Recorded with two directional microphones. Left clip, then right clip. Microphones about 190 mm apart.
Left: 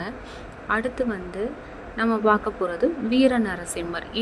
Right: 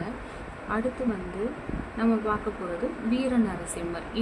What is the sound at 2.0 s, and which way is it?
Speech, 45° left (ahead or behind).